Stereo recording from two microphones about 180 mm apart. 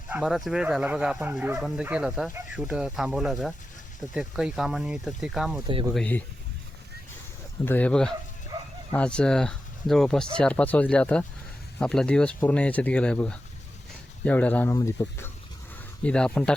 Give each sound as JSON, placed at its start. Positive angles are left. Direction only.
{"t": 0.1, "sound": "speech", "side_deg": 0}
{"t": 5.6, "sound": "speech", "side_deg": -25}
{"t": 5.9, "sound": "speech", "side_deg": 5}
{"t": 7.6, "sound": "speech", "side_deg": 10}
{"t": 16.0, "sound": "speech", "side_deg": 5}